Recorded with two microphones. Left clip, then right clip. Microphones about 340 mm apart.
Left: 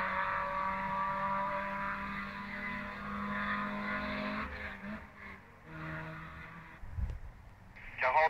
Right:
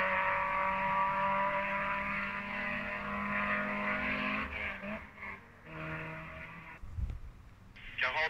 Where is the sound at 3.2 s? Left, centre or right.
Centre.